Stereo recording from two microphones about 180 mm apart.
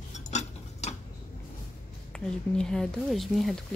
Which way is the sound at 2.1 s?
5° left (ahead or behind).